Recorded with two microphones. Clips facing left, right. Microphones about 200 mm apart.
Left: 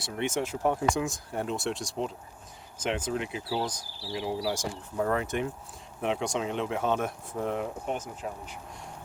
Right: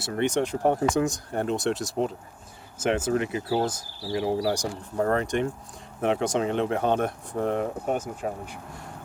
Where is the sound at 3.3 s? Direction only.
50° right (ahead or behind).